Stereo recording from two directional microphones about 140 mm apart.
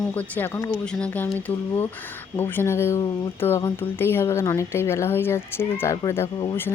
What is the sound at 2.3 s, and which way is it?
Speech, 15° left (ahead or behind).